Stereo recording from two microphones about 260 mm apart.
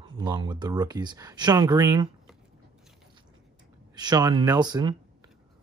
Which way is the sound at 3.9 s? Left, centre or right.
Centre.